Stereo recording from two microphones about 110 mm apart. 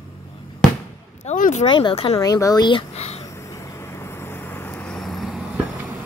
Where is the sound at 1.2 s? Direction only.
90° left.